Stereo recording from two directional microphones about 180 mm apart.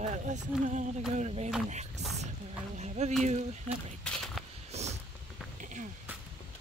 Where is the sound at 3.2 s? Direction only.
40° right (ahead or behind).